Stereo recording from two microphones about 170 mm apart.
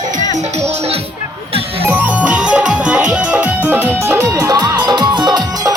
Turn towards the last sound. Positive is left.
turn(degrees=-25)  # may be behind; listen again after turning